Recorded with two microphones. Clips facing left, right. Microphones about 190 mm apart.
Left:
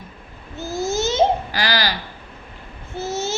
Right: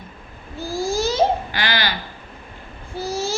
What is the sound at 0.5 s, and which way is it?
Babbling, 20° left (ahead or behind).